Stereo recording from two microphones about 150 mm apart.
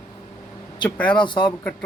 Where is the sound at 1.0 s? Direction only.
30° left (ahead or behind).